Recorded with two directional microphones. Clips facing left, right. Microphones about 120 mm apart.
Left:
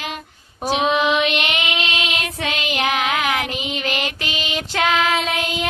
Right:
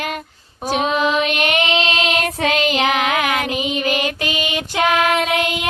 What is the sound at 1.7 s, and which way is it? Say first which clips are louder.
Music: right 6 dB; 35° right (ahead or behind).